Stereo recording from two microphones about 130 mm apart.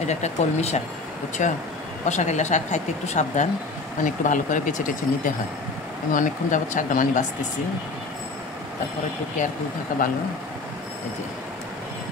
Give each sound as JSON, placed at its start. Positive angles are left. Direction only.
{"t": 0.0, "sound": "speech", "side_deg": 60}
{"t": 1.4, "sound": "speech", "side_deg": 75}
{"t": 2.0, "sound": "speech", "side_deg": 65}
{"t": 4.0, "sound": "speech", "side_deg": 80}
{"t": 9.9, "sound": "speech", "side_deg": 90}